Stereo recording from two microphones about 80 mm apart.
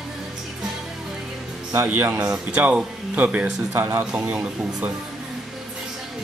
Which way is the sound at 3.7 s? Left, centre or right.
Right.